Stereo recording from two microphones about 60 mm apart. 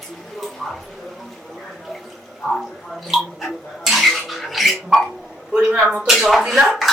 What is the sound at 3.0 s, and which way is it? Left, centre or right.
Dishes, centre.